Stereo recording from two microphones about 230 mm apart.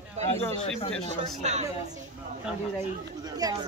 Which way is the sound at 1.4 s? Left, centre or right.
Right.